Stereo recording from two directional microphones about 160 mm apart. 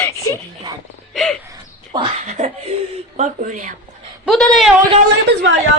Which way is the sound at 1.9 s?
30° right (ahead or behind).